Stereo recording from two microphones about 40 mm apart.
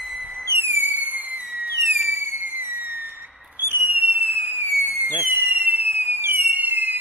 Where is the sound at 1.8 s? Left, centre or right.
Right.